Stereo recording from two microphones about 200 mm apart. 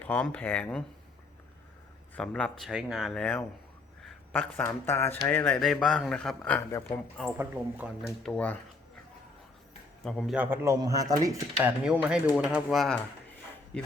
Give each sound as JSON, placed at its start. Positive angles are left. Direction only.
{"t": 0.0, "sound": "speech", "side_deg": 5}
{"t": 2.1, "sound": "speech", "side_deg": 5}
{"t": 7.3, "sound": "speech", "side_deg": -5}
{"t": 8.0, "sound": "speech", "side_deg": 5}
{"t": 10.0, "sound": "speech", "side_deg": 0}
{"t": 11.9, "sound": "speech", "side_deg": -5}